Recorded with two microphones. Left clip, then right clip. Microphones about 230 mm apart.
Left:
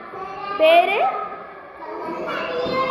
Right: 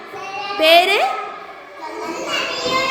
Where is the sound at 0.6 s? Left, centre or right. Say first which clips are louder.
Right 2 dB; right.